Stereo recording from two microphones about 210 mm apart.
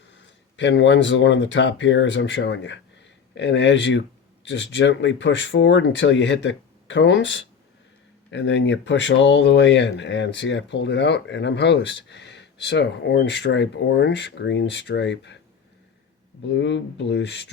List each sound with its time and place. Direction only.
0.1 s speech: 60° left (ahead or behind)
16.5 s speech: 55° left (ahead or behind)